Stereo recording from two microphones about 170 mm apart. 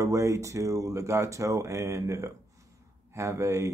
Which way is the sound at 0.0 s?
15° right (ahead or behind).